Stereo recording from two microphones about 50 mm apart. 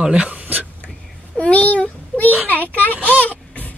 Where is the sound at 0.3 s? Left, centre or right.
Right.